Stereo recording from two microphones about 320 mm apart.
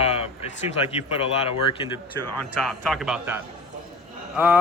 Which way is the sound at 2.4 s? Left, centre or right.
Centre.